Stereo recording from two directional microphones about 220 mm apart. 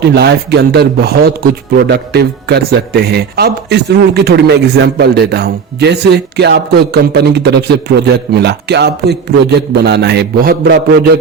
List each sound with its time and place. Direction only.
0.1 s a man's voice: 50° right (ahead or behind)